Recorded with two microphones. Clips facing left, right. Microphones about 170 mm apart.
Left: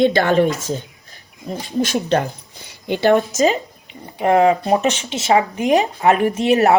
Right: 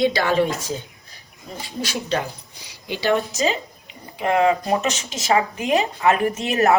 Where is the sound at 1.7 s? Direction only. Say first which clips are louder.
Left 9 dB; 40° left (ahead or behind).